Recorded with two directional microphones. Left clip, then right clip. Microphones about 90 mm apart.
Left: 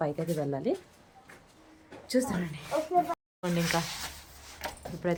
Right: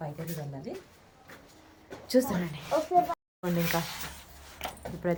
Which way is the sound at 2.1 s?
15° right (ahead or behind).